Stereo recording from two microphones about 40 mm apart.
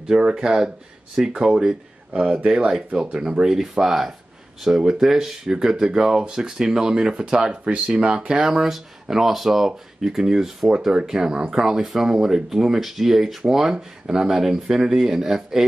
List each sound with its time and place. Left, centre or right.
0.1 s speech: centre
2.9 s speech: right
9.0 s speech: centre